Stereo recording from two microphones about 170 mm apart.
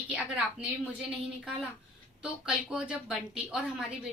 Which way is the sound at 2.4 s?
5° right (ahead or behind).